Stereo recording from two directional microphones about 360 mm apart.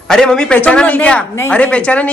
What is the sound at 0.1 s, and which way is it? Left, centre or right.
A woman's voice, centre.